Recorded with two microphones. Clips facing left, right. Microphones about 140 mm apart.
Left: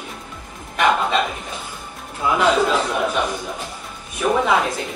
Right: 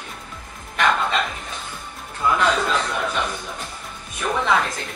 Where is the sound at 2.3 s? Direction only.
5° left (ahead or behind).